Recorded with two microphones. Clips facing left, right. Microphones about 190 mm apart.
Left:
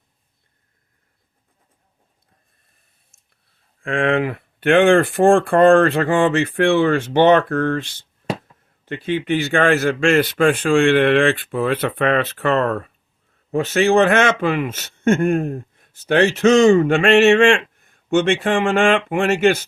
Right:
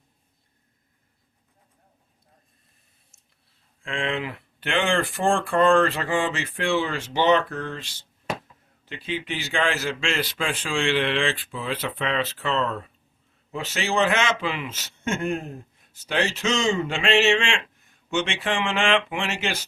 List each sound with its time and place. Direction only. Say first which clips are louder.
3.8 s a man's voice: left 10 dB; 55° left (ahead or behind)